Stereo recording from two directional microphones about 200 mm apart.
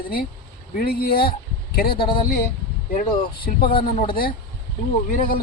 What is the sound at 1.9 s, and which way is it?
Speech, 25° left (ahead or behind).